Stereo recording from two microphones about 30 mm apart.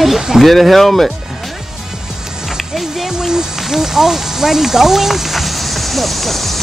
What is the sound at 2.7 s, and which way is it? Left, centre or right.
Music, centre.